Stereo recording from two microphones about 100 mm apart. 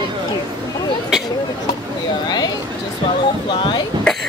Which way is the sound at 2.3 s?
45° left (ahead or behind).